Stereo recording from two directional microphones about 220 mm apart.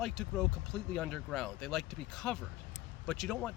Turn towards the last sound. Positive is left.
turn(degrees=5)  # may be behind; listen again after turning